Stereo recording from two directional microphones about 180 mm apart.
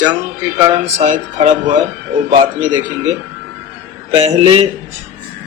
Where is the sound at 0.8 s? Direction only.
40° right (ahead or behind).